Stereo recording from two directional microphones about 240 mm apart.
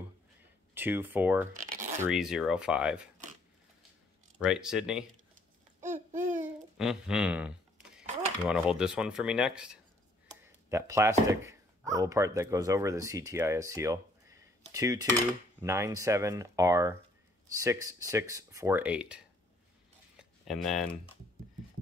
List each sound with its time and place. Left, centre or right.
0.7 s speech: centre
4.4 s speech: centre
5.8 s babbling: right
6.4 s babbling: centre
8.5 s speech: centre
20.2 s a sound: centre